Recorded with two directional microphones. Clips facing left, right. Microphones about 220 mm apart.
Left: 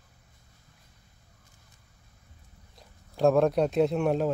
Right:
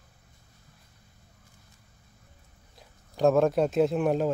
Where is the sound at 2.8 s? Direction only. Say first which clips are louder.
Even; centre (ahead or behind).